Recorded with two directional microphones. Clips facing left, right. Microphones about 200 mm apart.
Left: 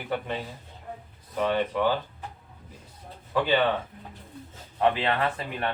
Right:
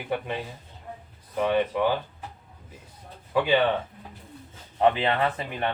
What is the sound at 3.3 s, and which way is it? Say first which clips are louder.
Speech: right 2 dB; 10° right (ahead or behind).